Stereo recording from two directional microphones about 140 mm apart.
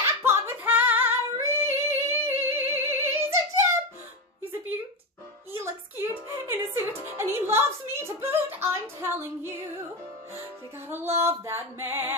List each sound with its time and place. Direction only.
0.2 s female singing: 15° right (ahead or behind)
5.5 s music: 20° right (ahead or behind)
10.9 s music: 15° right (ahead or behind)